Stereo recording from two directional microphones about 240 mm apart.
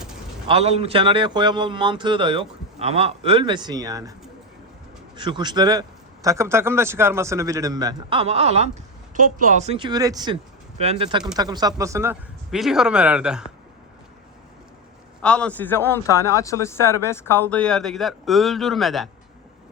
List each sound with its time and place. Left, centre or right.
0.4 s a man's voice: right
5.1 s a man's voice: centre
10.8 s a man's voice: right
12.5 s speech: centre
15.2 s a man's voice: centre